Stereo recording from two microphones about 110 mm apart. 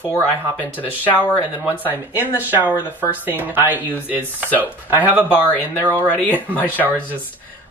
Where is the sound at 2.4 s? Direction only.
15° right (ahead or behind).